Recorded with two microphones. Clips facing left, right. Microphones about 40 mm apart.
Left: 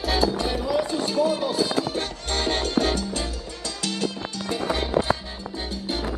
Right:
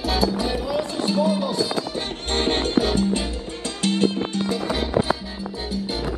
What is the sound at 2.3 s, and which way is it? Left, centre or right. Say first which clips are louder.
Music: right 3 dB; right.